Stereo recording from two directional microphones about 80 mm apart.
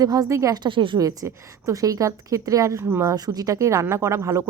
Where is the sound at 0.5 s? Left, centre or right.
Right.